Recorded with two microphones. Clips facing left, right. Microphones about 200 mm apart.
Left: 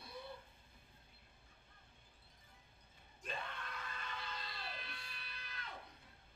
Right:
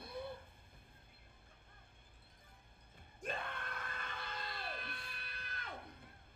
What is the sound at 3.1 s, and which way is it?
Screaming, 55° right (ahead or behind).